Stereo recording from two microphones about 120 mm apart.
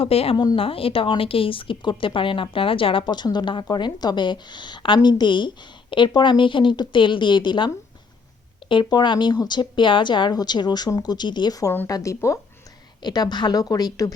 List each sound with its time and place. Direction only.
0.0 s speech: 55° left (ahead or behind)
8.7 s a woman's voice: 40° left (ahead or behind)
13.0 s a woman's voice: 35° left (ahead or behind)